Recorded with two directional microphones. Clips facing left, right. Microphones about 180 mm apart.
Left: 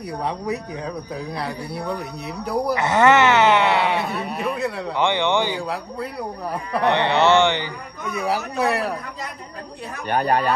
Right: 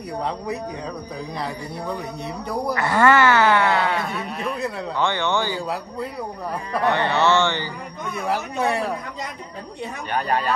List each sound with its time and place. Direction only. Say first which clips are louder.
1.3 s speech: left 1 dB; centre (ahead or behind)
2.7 s speech: left 1 dB; 20° left (ahead or behind)
4.1 s speech: left 2 dB; centre (ahead or behind)
4.9 s a man's voice: left 3 dB; 15° left (ahead or behind)
6.8 s a man's voice: left 2 dB; 20° left (ahead or behind)
8.2 s speech: left 1 dB; 5° left (ahead or behind)
10.0 s speech: left 4 dB; 45° left (ahead or behind)